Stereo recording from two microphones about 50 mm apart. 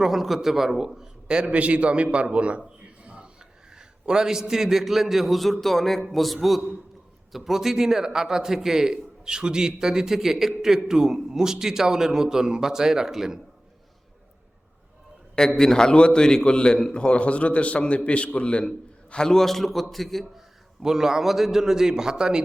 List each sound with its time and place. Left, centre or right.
0.0 s a man's voice: centre; by 2.6 s right
3.0 s a sound: right
3.7 s a man's voice: centre
15.4 s a man's voice: centre
20.8 s a man's voice: centre